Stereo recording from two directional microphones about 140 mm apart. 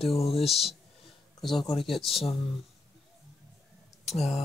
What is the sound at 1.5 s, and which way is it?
Speech, 35° left (ahead or behind).